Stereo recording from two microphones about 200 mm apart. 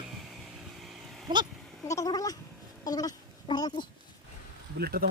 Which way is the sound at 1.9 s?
15° left (ahead or behind).